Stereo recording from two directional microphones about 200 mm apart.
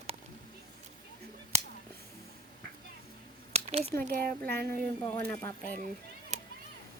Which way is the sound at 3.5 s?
30° right (ahead or behind).